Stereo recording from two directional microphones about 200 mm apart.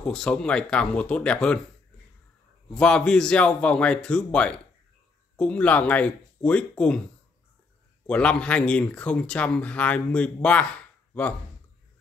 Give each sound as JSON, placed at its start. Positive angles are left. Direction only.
{"t": 0.0, "sound": "speech", "side_deg": 5}
{"t": 2.7, "sound": "speech", "side_deg": 5}
{"t": 8.1, "sound": "speech", "side_deg": 5}